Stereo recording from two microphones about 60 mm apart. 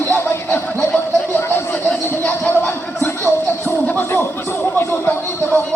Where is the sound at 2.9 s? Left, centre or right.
Left.